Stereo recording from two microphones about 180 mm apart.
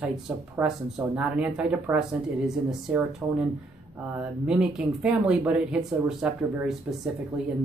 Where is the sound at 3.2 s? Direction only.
10° right (ahead or behind).